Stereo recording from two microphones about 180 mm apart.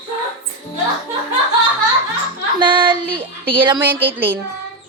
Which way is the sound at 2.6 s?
25° right (ahead or behind).